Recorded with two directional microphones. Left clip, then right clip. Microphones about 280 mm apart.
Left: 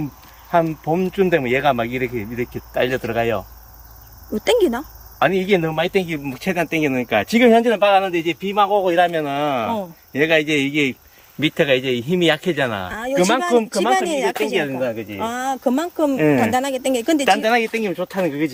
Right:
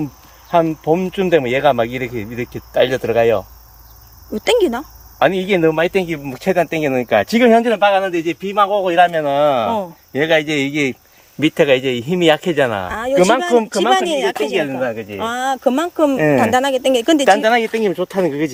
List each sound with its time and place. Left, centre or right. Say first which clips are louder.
0.5 s speech: right 4 dB; right
4.4 s speech: right 2 dB; centre
5.2 s speech: right 3 dB; right
7.9 s speech: right 1 dB; centre
13.9 s speech: right 3 dB; centre
17.2 s speech: right 2 dB; right